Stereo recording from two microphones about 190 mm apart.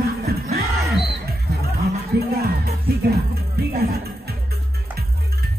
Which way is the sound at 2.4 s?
55° right (ahead or behind).